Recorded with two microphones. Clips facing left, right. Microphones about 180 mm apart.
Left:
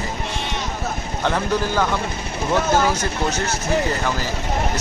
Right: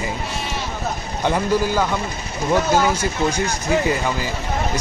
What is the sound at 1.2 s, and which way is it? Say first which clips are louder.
Speech: right 2 dB; 10° right (ahead or behind).